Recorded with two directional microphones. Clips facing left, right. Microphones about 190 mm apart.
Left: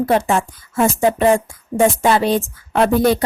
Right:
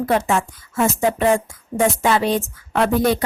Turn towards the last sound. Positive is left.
turn(degrees=35)  # may be behind; listen again after turning